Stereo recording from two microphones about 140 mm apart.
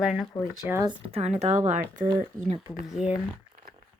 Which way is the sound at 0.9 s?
45° right (ahead or behind).